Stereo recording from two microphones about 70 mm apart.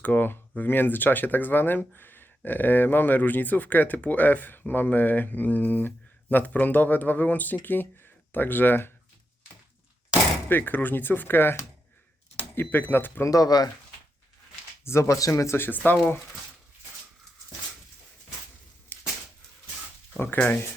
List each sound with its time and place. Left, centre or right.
0.0 s speech: left
10.5 s speech: left
13.2 s speech: left
14.8 s speech: left
18.9 s a sound: left
20.1 s speech: left